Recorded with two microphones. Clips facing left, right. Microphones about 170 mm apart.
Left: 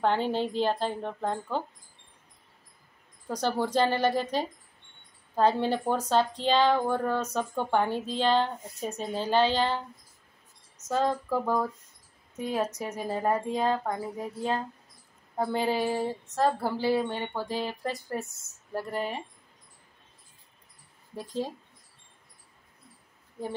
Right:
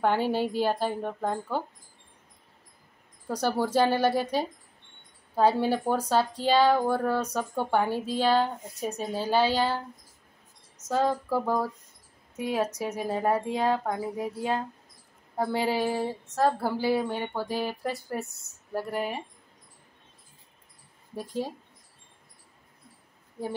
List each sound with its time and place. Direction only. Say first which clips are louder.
0.0 s speech: right 1 dB; 10° right (ahead or behind)
3.3 s speech: right 1 dB; 5° right (ahead or behind)
10.9 s speech: right 1 dB; 5° right (ahead or behind)
18.2 s speech: right 3 dB; 60° right (ahead or behind)
18.7 s speech: right 1 dB; 5° right (ahead or behind)